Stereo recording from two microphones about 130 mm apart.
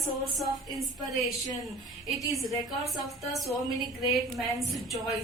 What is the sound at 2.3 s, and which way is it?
Speech, centre (ahead or behind).